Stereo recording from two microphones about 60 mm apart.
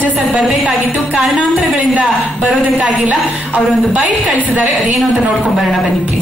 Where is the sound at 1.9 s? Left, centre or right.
Centre.